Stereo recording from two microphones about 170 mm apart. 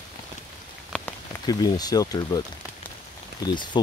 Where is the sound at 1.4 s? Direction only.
20° left (ahead or behind).